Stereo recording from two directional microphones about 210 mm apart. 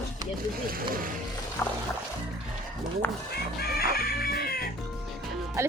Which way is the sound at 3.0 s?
10° left (ahead or behind).